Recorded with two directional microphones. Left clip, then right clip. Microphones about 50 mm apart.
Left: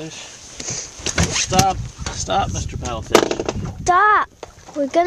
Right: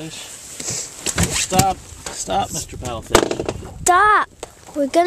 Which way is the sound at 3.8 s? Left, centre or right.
Right.